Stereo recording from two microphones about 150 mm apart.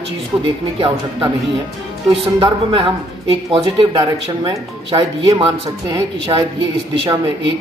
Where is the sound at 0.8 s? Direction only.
35° right (ahead or behind).